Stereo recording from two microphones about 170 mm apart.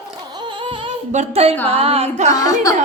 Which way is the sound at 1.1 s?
40° right (ahead or behind).